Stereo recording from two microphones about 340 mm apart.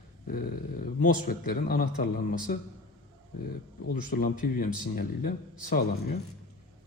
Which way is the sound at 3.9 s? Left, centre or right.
Left.